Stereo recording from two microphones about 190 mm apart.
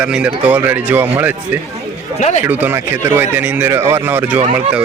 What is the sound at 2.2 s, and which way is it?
Speech, 40° left (ahead or behind).